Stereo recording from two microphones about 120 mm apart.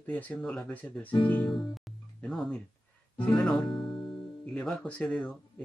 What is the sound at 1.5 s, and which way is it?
Music, centre (ahead or behind).